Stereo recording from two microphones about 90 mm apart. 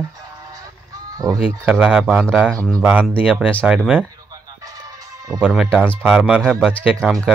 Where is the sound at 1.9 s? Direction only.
15° right (ahead or behind).